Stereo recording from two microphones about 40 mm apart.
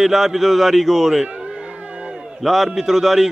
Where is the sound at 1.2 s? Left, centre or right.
Right.